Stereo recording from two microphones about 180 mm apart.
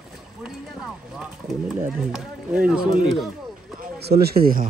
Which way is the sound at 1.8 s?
5° right (ahead or behind).